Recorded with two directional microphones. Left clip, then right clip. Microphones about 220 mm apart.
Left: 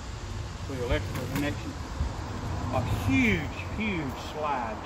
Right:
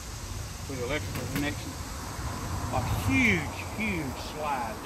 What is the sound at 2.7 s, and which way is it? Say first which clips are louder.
Speech: even; 20° right (ahead or behind).